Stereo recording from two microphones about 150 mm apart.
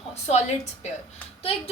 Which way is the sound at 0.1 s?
45° left (ahead or behind).